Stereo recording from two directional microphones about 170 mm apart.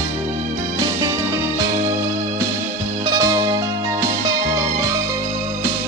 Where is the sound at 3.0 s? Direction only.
20° right (ahead or behind).